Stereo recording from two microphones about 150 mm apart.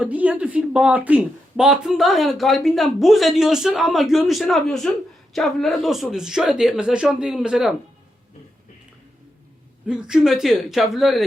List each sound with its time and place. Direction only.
0.0 s speech: 10° right (ahead or behind)
9.8 s speech: 5° right (ahead or behind)